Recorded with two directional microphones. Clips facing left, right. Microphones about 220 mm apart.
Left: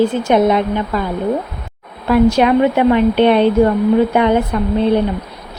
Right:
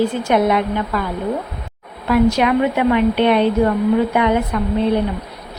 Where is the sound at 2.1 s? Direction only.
30° left (ahead or behind).